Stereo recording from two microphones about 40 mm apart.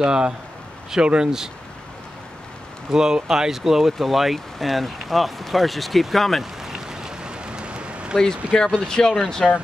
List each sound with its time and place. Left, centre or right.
0.0 s speech: centre
2.9 s speech: centre
6.4 s rain: centre; by 8.2 s right
8.5 s speech: centre